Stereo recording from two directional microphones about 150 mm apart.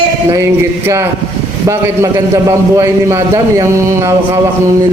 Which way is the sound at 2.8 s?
20° right (ahead or behind).